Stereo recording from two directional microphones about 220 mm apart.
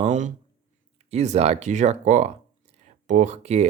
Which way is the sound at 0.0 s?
35° right (ahead or behind).